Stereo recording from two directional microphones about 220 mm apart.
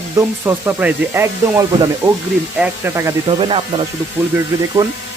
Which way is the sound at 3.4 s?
25° right (ahead or behind).